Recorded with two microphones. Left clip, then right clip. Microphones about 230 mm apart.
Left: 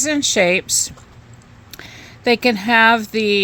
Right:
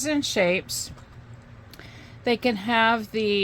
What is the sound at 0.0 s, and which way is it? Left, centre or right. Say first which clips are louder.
Speech: left 7 dB; left.